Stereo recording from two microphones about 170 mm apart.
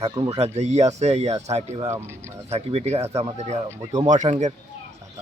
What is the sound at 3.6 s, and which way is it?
Speech, 20° right (ahead or behind).